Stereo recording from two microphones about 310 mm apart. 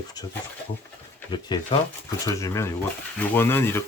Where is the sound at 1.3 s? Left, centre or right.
Centre.